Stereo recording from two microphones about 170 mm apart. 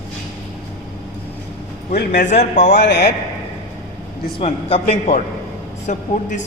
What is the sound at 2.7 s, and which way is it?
Speech, 90° left.